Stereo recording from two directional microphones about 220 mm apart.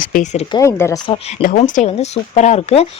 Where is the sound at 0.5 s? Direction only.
15° left (ahead or behind).